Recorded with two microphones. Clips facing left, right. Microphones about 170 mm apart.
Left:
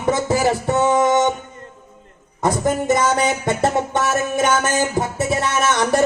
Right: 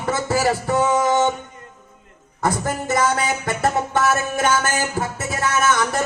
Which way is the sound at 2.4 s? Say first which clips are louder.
Left 4 dB; 20° left (ahead or behind).